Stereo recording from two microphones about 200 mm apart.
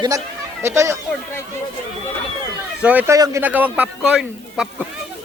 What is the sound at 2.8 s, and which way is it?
Speech, 10° right (ahead or behind).